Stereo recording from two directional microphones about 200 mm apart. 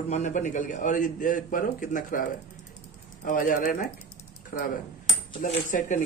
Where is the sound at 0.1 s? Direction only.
35° left (ahead or behind).